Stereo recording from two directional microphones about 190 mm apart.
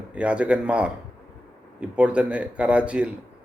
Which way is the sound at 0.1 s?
5° right (ahead or behind).